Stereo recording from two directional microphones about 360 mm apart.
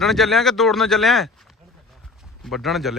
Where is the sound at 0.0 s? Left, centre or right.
Centre.